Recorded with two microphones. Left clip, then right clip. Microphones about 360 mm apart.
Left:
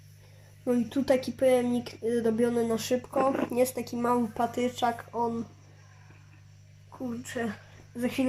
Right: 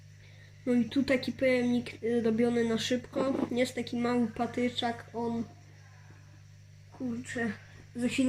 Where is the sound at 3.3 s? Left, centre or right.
Left.